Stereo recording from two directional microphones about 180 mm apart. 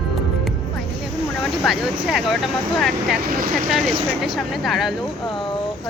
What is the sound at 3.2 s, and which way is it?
Speech, 55° right (ahead or behind).